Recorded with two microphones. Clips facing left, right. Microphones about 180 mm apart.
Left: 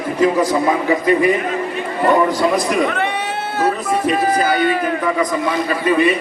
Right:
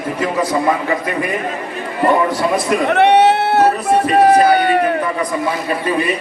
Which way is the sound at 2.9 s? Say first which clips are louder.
Right 11 dB; 70° right (ahead or behind).